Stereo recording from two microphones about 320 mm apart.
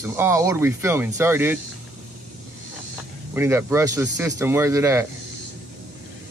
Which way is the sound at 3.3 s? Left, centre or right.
Centre.